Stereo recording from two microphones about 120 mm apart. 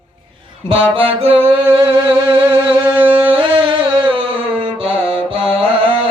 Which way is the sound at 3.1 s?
45° right (ahead or behind).